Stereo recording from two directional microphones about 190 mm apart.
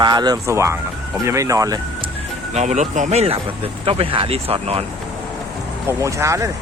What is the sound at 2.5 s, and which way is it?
Speech, 35° right (ahead or behind).